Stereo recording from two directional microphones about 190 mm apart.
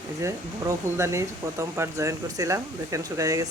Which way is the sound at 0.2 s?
15° right (ahead or behind).